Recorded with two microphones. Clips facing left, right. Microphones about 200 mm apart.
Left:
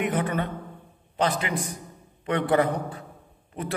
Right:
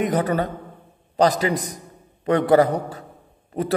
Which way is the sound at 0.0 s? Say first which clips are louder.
Right 5 dB; 40° right (ahead or behind).